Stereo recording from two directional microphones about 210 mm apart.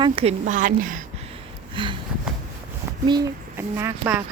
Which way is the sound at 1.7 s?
25° right (ahead or behind).